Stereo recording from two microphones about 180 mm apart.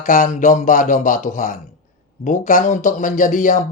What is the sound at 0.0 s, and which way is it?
Speech, 45° left (ahead or behind).